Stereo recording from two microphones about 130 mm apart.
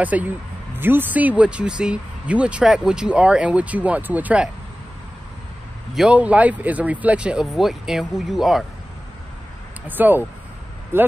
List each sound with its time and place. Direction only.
0.0 s speech: 10° right (ahead or behind)
5.9 s speech: 10° right (ahead or behind)
9.8 s speech: 15° right (ahead or behind)